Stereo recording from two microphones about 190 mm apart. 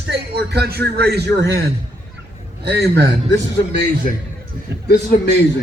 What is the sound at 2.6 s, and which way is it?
Speech, 60° right (ahead or behind).